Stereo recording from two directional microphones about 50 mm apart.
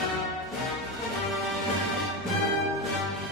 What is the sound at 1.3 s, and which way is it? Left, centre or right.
Music, centre.